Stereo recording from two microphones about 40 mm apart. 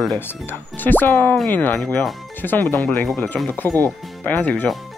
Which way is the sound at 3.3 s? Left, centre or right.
Left.